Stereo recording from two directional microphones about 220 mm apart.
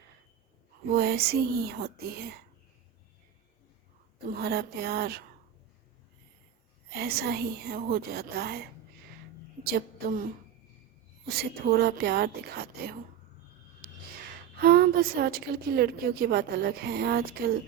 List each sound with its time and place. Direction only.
0.9 s a woman's voice: 45° right (ahead or behind)
4.4 s a woman's voice: 45° right (ahead or behind)
6.9 s a woman's voice: 45° right (ahead or behind)
9.6 s a woman's voice: 45° right (ahead or behind)
11.3 s a woman's voice: 45° right (ahead or behind)
13.8 s a sound: 45° right (ahead or behind)
14.6 s a woman's voice: 45° right (ahead or behind)